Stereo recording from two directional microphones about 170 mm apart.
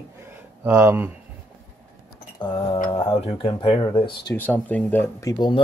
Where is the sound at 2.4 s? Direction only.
30° left (ahead or behind).